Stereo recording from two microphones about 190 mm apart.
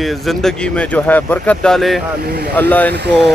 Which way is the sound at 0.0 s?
Centre (ahead or behind).